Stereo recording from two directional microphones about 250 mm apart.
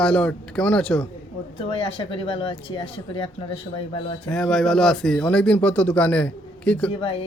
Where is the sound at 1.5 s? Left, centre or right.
Left.